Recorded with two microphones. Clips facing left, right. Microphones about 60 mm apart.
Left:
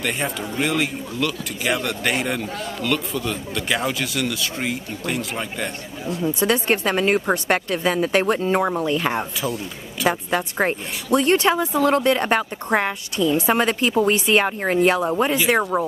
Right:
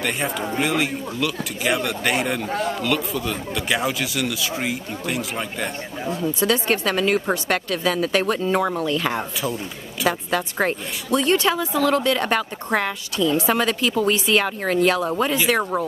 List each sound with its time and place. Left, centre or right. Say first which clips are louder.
0.0 s speech: right 1 dB; centre
6.4 s speech: left 1 dB; left
11.1 s speech: left 2 dB; left
15.7 s speech: left 2 dB; centre